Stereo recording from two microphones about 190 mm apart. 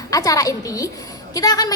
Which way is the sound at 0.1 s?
20° left (ahead or behind).